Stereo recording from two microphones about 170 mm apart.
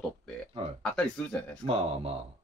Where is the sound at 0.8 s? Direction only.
5° left (ahead or behind).